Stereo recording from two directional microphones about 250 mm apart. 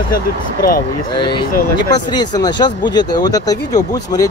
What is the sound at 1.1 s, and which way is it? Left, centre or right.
Speech, centre.